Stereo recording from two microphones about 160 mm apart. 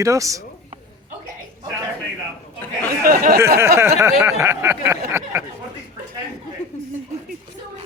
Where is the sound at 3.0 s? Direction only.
65° right (ahead or behind).